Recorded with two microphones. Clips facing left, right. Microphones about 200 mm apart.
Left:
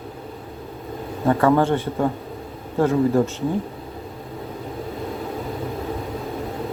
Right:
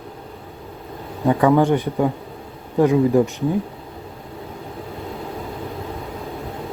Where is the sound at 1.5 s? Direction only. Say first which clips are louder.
Right 3 dB; 15° right (ahead or behind).